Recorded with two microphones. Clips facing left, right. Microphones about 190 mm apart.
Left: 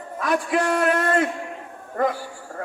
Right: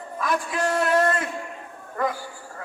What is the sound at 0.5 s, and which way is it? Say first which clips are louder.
Speech: even; 65° left (ahead or behind).